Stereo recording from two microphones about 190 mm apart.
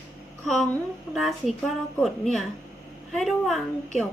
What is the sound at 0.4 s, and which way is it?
A woman's voice, centre (ahead or behind).